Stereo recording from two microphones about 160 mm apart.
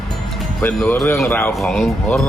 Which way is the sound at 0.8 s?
10° left (ahead or behind).